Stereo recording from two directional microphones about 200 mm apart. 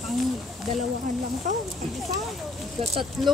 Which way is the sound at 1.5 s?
40° right (ahead or behind).